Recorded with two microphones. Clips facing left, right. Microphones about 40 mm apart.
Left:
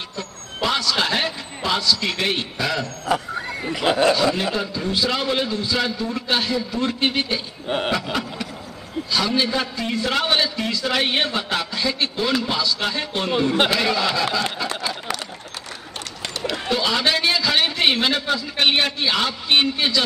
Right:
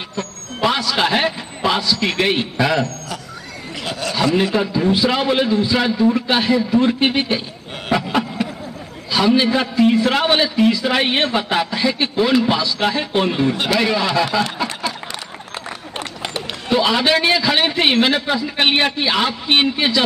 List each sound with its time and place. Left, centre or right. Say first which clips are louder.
0.6 s a man's voice: right 4 dB; centre
3.8 s speech: left 8 dB; left
4.6 s a man's voice: right 6 dB; centre
7.9 s a sound: right 5 dB; right
9.1 s a man's voice: right 6 dB; centre
16.6 s a man's voice: right 5 dB; centre